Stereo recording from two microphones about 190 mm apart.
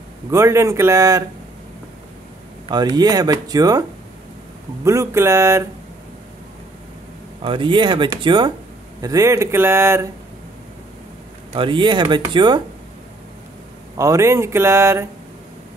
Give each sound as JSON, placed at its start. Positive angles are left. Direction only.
{"t": 0.3, "sound": "speech", "side_deg": -15}
{"t": 2.7, "sound": "speech", "side_deg": -20}
{"t": 4.8, "sound": "speech", "side_deg": -15}
{"t": 7.4, "sound": "speech", "side_deg": -25}
{"t": 11.5, "sound": "speech", "side_deg": -25}
{"t": 13.9, "sound": "speech", "side_deg": -15}